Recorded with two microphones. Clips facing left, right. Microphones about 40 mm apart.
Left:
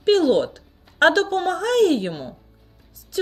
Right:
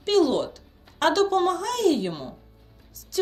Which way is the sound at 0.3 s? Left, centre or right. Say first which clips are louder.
Left 6 dB; left.